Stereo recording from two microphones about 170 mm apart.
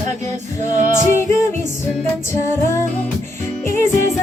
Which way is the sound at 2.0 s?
15° left (ahead or behind).